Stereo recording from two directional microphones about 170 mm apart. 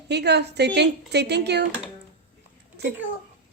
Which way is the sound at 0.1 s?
80° right.